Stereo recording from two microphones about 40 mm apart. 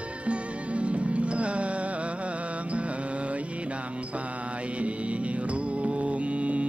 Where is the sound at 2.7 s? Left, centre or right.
Right.